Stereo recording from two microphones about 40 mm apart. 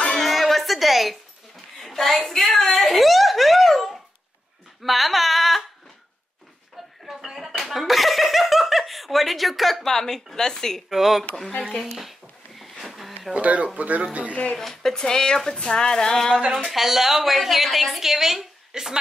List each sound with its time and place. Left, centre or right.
0.2 s music: centre
1.8 s a sound: centre
7.1 s slap: centre
9.8 s speech: centre
10.9 s speech: centre
12.0 s a sound: centre
13.3 s speech: right
14.3 s speech: left
14.6 s speech: centre
16.6 s a woman's voice: centre